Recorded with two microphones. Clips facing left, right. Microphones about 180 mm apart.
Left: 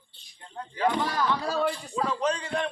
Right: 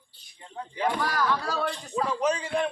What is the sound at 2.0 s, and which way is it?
Speech, 5° right (ahead or behind).